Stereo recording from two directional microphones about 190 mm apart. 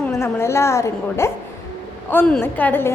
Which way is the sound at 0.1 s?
15° left (ahead or behind).